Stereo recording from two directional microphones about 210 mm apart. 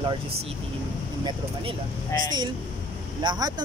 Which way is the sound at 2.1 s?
10° left (ahead or behind).